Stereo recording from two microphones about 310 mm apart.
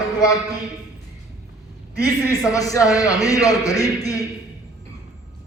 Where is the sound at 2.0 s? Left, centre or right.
Centre.